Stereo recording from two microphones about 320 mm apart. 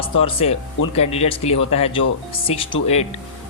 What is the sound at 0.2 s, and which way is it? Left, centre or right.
Speech, centre.